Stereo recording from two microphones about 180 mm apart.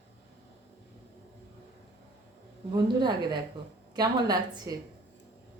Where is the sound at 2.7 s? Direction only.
25° right (ahead or behind).